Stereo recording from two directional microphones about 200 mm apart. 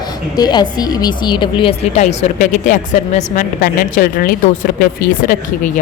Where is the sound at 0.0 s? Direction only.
20° left (ahead or behind).